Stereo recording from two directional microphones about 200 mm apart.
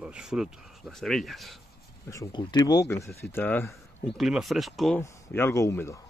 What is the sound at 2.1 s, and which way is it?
Speech, 20° left (ahead or behind).